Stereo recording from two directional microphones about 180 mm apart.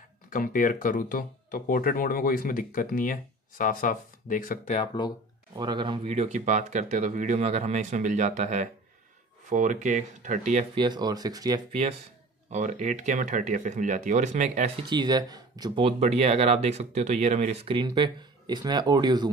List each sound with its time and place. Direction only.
0.3 s speech: 50° left (ahead or behind)
4.7 s speech: 25° left (ahead or behind)
5.6 s speech: 25° right (ahead or behind)
6.0 s speech: 40° right (ahead or behind)
10.7 s speech: 25° right (ahead or behind)
12.4 s speech: 40° right (ahead or behind)
14.9 s speech: 25° right (ahead or behind)